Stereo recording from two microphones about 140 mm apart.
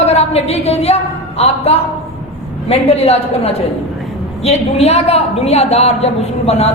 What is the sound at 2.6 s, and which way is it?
A woman's voice, 50° left (ahead or behind).